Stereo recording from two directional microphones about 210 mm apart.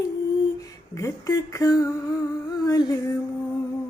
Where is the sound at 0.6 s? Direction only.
15° left (ahead or behind).